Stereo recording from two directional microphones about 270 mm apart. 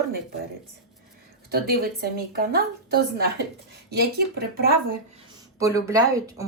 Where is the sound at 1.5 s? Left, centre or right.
Right.